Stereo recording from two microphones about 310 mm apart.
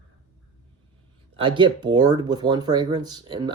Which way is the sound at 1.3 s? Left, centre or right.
Centre.